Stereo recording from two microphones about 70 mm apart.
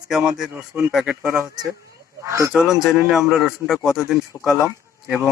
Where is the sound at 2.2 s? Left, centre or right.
Right.